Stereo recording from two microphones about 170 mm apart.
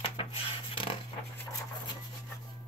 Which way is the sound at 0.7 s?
30° left (ahead or behind).